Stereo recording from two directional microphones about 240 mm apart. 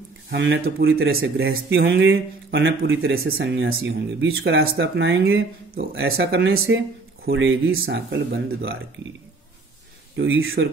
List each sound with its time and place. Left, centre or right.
0.3 s speech: right
0.8 s speech: right
1.1 s speech: right
3.6 s speech: right
6.1 s speech: right
10.1 s speech: right